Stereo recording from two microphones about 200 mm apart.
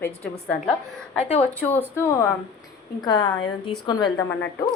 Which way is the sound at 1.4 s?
10° left (ahead or behind).